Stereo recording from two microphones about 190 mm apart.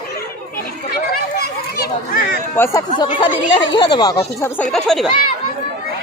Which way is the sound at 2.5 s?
15° left (ahead or behind).